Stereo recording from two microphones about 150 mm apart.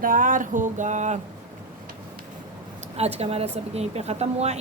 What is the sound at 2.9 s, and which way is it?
Speech, 45° right (ahead or behind).